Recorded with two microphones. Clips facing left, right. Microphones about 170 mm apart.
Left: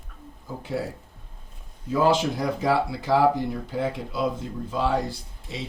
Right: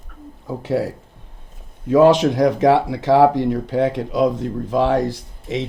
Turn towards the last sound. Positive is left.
turn(degrees=-85)